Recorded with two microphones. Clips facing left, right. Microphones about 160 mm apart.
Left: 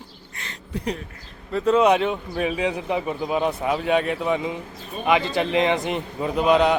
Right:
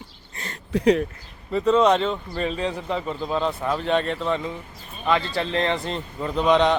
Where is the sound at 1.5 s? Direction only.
5° left (ahead or behind).